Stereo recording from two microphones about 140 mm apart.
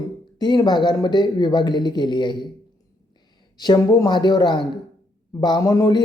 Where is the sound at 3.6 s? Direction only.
25° left (ahead or behind).